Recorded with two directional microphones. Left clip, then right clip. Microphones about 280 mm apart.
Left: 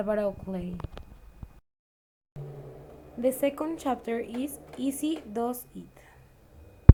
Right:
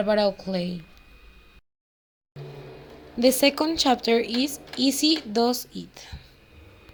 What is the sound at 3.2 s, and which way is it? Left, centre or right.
A woman's voice, right.